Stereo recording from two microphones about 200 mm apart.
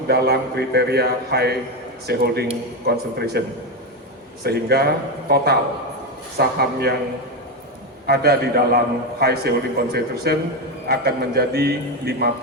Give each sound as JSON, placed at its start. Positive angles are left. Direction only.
{"t": 0.1, "sound": "a man's voice", "side_deg": -55}
{"t": 4.4, "sound": "a man's voice", "side_deg": -55}
{"t": 8.0, "sound": "a man's voice", "side_deg": -50}